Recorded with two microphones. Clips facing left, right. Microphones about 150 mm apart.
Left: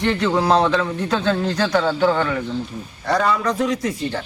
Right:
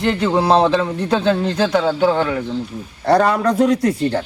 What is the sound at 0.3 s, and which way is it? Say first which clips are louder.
Speech: right 4 dB; 30° right (ahead or behind).